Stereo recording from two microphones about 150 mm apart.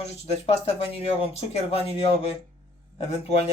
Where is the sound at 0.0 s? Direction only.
40° left (ahead or behind).